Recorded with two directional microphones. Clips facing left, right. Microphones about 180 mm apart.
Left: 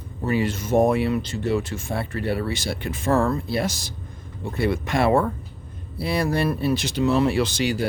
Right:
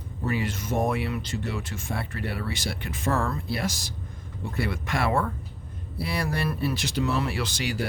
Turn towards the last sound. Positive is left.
turn(degrees=25)  # may be behind; listen again after turning